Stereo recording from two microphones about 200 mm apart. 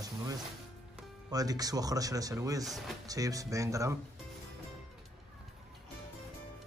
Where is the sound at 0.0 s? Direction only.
20° right (ahead or behind).